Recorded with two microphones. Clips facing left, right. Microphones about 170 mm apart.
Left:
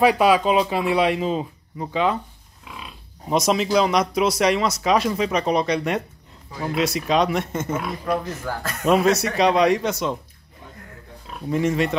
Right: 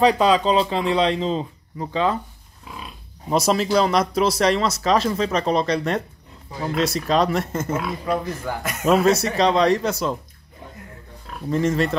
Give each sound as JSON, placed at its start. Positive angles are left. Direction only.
{"t": 0.0, "sound": "speech", "side_deg": 10}
{"t": 2.7, "sound": "pig", "side_deg": -35}
{"t": 3.3, "sound": "speech", "side_deg": 0}
{"t": 8.5, "sound": "speech", "side_deg": -20}
{"t": 8.8, "sound": "speech", "side_deg": 0}
{"t": 9.1, "sound": "speech", "side_deg": -25}
{"t": 9.4, "sound": "speech", "side_deg": 5}
{"t": 11.4, "sound": "speech", "side_deg": 10}